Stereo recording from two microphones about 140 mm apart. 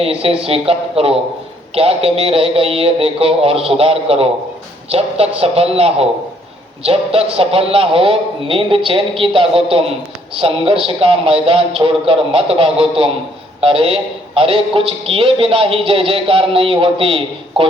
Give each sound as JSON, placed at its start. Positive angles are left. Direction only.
{"t": 0.0, "sound": "a man's voice", "side_deg": -45}